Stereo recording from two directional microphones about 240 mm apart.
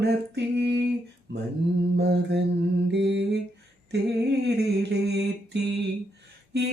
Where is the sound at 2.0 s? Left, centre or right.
Right.